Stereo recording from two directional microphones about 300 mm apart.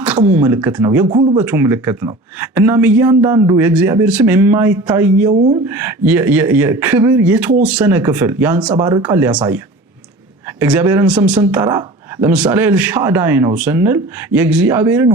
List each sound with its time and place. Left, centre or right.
0.3 s speech: centre
1.4 s speech: centre
10.6 s speech: centre